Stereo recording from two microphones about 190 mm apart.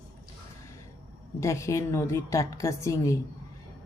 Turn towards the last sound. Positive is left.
turn(degrees=15)  # may be behind; listen again after turning